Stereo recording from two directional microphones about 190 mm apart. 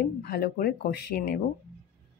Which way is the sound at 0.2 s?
55° left (ahead or behind).